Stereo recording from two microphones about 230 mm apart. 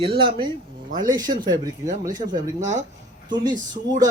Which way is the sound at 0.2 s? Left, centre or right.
Right.